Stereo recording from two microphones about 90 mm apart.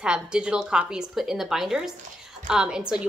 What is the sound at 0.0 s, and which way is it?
A woman's voice, 10° right (ahead or behind).